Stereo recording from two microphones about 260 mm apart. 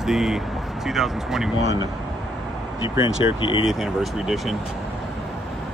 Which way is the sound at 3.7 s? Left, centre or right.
Centre.